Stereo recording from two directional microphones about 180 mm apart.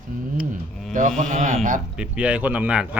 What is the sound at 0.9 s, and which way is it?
Speech, 45° right (ahead or behind).